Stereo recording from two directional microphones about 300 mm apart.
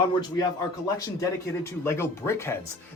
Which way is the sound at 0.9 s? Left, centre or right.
Centre.